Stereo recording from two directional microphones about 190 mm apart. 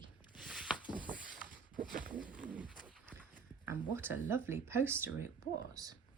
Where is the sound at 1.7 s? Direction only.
45° right (ahead or behind).